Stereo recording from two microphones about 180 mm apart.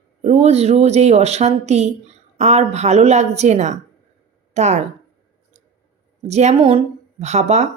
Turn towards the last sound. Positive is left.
turn(degrees=-40)  # may be behind; listen again after turning